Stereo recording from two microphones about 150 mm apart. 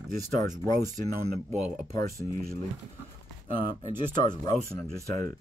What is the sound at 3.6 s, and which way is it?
Speech, 65° right (ahead or behind).